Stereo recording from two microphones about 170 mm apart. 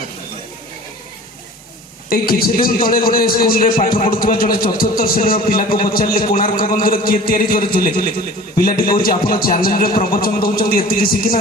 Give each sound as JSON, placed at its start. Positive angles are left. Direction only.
{"t": 2.0, "sound": "a man's voice", "side_deg": 60}